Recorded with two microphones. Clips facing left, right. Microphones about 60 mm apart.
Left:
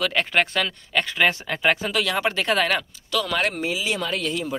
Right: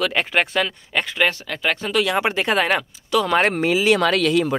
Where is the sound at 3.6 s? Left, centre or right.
Right.